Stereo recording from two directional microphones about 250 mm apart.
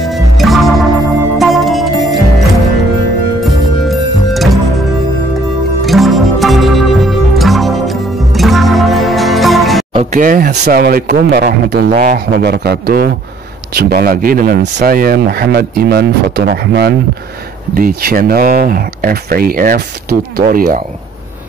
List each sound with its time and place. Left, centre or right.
0.0 s music: centre
3.4 s music: centre
5.9 s music: centre
9.9 s speech: right